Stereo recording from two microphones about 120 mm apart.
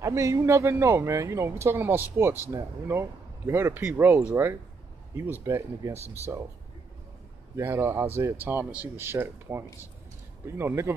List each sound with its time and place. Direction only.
0.0 s speech: 25° right (ahead or behind)
7.5 s speech: 20° right (ahead or behind)